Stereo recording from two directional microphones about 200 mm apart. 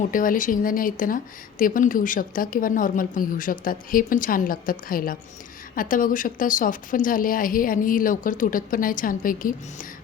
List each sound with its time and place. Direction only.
0.1 s speech: 45° left (ahead or behind)